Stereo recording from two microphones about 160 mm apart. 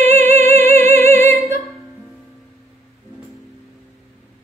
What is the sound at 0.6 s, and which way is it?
Music, 15° left (ahead or behind).